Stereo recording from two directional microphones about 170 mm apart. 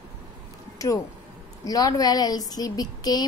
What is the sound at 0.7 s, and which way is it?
A woman's voice, 20° left (ahead or behind).